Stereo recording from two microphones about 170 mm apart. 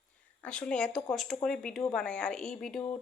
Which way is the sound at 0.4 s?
5° left (ahead or behind).